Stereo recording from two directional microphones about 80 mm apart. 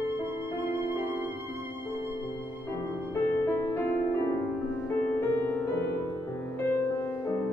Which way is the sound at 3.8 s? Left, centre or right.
Left.